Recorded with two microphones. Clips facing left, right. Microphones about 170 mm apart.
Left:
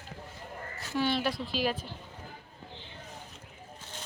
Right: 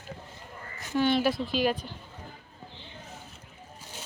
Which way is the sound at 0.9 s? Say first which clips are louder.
Right 5 dB; centre (ahead or behind).